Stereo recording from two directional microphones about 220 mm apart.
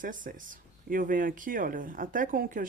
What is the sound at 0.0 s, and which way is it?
Speech, 35° right (ahead or behind).